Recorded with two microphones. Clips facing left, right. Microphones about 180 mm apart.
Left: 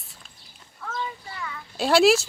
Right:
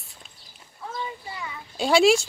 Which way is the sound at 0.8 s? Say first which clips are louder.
Left 1 dB; 20° right (ahead or behind).